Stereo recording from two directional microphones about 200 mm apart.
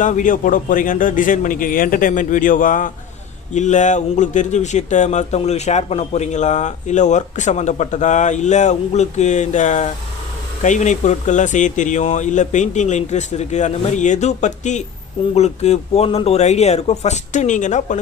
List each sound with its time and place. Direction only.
0.0 s speech: 40° left (ahead or behind)